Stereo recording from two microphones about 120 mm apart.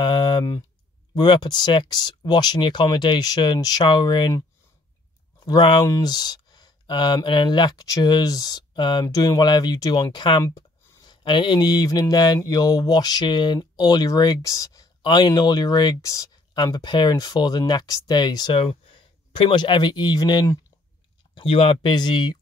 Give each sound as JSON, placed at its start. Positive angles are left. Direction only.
{"t": 0.0, "sound": "speech", "side_deg": 40}
{"t": 5.4, "sound": "speech", "side_deg": 40}
{"t": 10.4, "sound": "speech", "side_deg": 25}
{"t": 18.5, "sound": "speech", "side_deg": 50}
{"t": 21.4, "sound": "speech", "side_deg": 50}
{"t": 21.9, "sound": "speech", "side_deg": 35}